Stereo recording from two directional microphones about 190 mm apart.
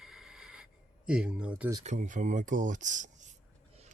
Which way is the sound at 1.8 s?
40° right (ahead or behind).